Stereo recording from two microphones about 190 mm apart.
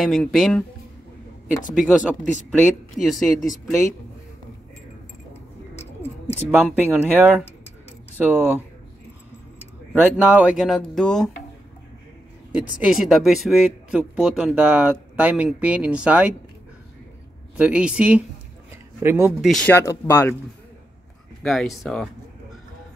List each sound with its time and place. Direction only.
0.0 s speech: centre (ahead or behind)
1.8 s speech: centre (ahead or behind)
6.6 s speech: 10° right (ahead or behind)
9.9 s speech: 10° right (ahead or behind)
12.8 s speech: centre (ahead or behind)
17.6 s speech: 5° right (ahead or behind)
19.4 s speech: centre (ahead or behind)
19.7 s speech: 15° left (ahead or behind)
21.4 s speech: centre (ahead or behind)